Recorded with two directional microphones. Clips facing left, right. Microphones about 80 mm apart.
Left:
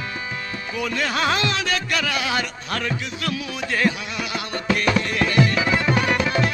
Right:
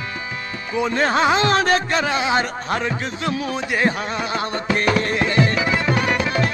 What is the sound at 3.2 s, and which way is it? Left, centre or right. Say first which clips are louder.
Music: right 5 dB; right.